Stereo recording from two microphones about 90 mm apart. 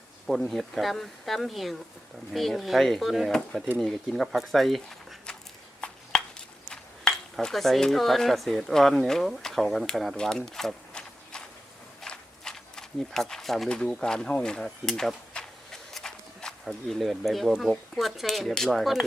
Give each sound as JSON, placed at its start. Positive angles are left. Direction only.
{"t": 0.3, "sound": "speech", "side_deg": 0}
{"t": 5.8, "sound": "a sound", "side_deg": 10}
{"t": 6.7, "sound": "speech", "side_deg": 5}